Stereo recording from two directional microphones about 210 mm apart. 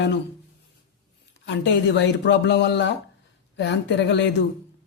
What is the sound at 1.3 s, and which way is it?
Speech, 60° left (ahead or behind).